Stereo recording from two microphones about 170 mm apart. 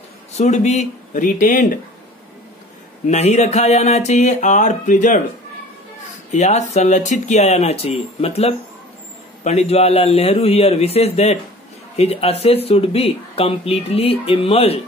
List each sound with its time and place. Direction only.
0.4 s speech: 40° left (ahead or behind)
3.1 s speech: 40° left (ahead or behind)
6.3 s speech: 40° left (ahead or behind)